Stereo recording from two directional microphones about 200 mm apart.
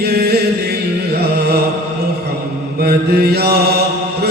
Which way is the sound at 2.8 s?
50° right (ahead or behind).